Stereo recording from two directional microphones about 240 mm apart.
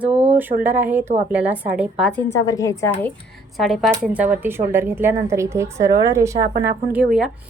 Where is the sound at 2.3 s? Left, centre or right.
Centre.